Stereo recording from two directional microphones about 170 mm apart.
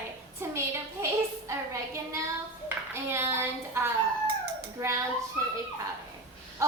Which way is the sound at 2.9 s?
15° right (ahead or behind).